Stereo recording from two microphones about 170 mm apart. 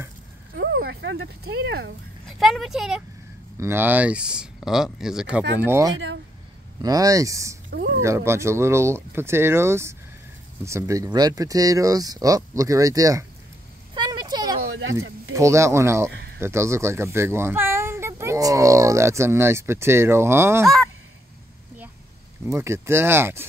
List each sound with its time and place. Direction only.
0.6 s a sound: 65° right (ahead or behind)
2.2 s speech: centre (ahead or behind)
3.5 s speech: 15° right (ahead or behind)
6.8 s speech: 20° right (ahead or behind)
13.9 s a sound: 25° right (ahead or behind)
15.0 s speech: 15° right (ahead or behind)
22.5 s speech: 15° right (ahead or behind)